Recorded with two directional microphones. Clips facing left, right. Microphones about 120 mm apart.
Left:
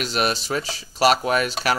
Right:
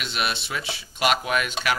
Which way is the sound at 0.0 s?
40° left (ahead or behind).